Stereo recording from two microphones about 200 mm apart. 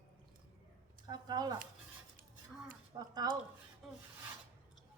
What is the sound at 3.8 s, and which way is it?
Filing, centre (ahead or behind).